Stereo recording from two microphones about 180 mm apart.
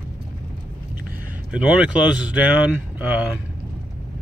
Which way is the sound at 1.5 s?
5° right (ahead or behind).